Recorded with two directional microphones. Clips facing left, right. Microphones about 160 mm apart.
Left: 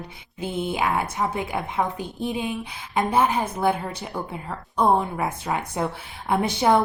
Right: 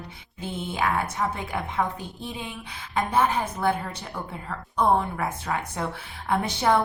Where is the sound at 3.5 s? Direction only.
20° left (ahead or behind).